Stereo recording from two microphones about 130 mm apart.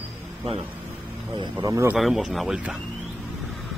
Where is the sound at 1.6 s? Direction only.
20° right (ahead or behind).